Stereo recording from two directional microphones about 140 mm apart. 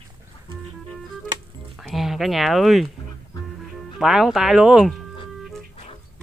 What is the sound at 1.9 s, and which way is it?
Speech, centre (ahead or behind).